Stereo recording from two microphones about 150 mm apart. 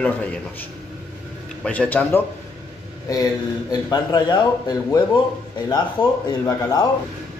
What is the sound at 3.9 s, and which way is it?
Speech, 25° left (ahead or behind).